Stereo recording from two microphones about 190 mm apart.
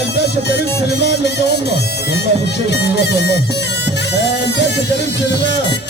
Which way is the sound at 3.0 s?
65° left (ahead or behind).